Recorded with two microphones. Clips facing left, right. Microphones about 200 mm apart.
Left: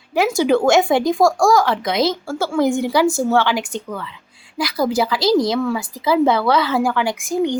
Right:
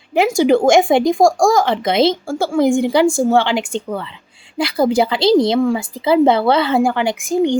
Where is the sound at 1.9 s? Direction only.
25° right (ahead or behind).